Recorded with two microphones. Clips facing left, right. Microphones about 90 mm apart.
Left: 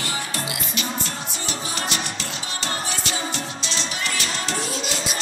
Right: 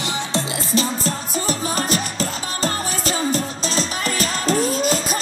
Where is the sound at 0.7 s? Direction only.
35° right (ahead or behind).